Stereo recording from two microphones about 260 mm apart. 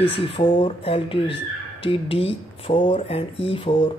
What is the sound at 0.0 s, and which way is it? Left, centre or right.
Speech, left.